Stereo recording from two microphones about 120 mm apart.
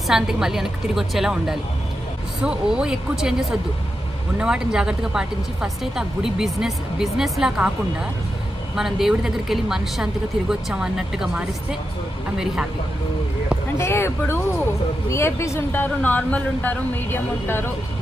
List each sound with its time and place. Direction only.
0.1 s a woman's voice: 5° right (ahead or behind)
13.7 s speech: 20° left (ahead or behind)